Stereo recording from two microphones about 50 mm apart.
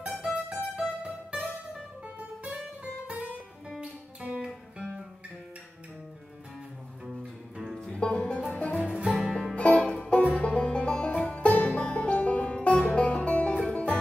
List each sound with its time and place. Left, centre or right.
0.3 s music: centre
2.4 s music: right
7.9 s music: left
8.7 s music: centre
9.3 s music: centre
9.6 s music: left